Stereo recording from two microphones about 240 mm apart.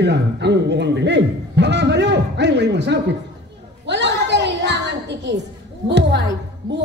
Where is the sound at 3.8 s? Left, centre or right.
Right.